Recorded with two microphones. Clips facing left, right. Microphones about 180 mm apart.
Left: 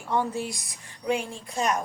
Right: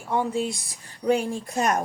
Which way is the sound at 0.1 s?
15° right (ahead or behind).